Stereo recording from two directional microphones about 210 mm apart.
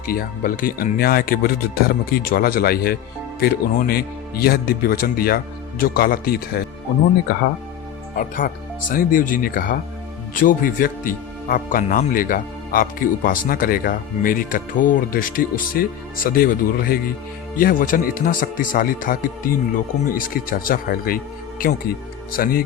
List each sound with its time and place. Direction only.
0.0 s speech: 45° left (ahead or behind)
8.1 s speech: 40° left (ahead or behind)